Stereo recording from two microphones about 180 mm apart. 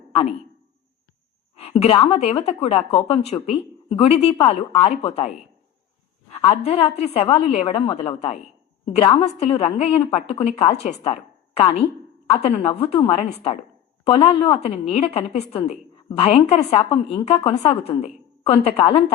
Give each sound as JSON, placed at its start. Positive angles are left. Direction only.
{"t": 0.1, "sound": "a man's voice", "side_deg": 35}
{"t": 1.5, "sound": "speech", "side_deg": 35}
{"t": 6.3, "sound": "speech", "side_deg": 35}